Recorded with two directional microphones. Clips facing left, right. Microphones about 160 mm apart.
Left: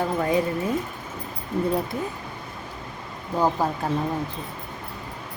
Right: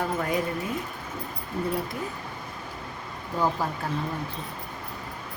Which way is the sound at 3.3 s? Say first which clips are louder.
Left 4 dB; 40° left (ahead or behind).